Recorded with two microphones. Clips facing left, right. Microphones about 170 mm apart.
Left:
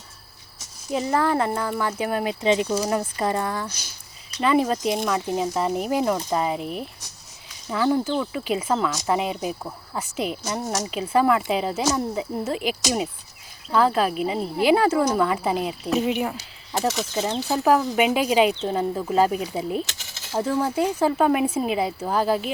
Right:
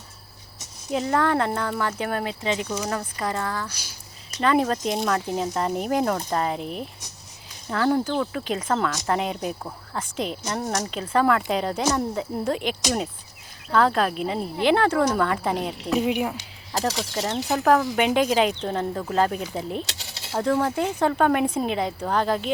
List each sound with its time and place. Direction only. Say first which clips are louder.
0.9 s speech: even; centre (ahead or behind)
2.4 s speech: left 5 dB; 20° left (ahead or behind)
4.4 s speech: left 1 dB; 5° left (ahead or behind)
16.8 s speech: left 2 dB; 10° left (ahead or behind)